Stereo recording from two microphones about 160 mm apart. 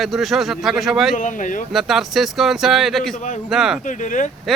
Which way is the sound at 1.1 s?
50° left (ahead or behind).